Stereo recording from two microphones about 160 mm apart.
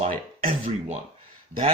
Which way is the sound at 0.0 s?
60° right (ahead or behind).